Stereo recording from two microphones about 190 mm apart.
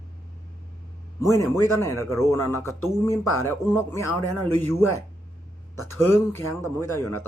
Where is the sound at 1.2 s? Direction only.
15° left (ahead or behind).